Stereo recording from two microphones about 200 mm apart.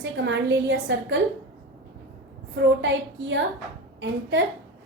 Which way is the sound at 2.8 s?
65° right (ahead or behind).